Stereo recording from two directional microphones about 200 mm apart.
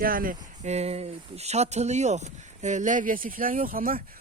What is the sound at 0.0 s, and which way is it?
Speech, 45° right (ahead or behind).